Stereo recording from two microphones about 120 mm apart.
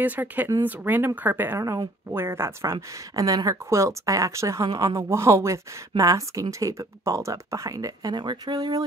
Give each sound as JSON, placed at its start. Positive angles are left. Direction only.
{"t": 0.0, "sound": "speech", "side_deg": -15}